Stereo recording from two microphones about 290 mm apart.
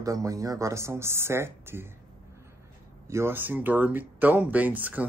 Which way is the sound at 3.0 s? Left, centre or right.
Centre.